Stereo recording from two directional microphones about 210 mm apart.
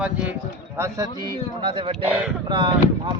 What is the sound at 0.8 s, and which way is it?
A man's voice, 20° right (ahead or behind).